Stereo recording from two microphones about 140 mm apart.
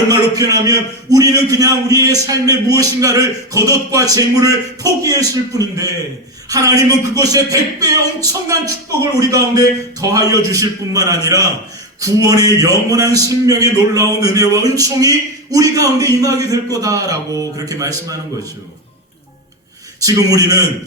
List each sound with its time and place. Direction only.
0.1 s a man's voice: 25° right (ahead or behind)
20.0 s a man's voice: 25° right (ahead or behind)